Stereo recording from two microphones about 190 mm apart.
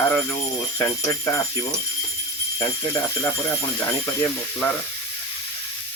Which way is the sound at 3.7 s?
10° left (ahead or behind).